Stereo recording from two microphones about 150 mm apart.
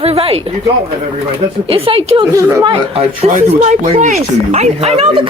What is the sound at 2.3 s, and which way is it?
Speech, 20° right (ahead or behind).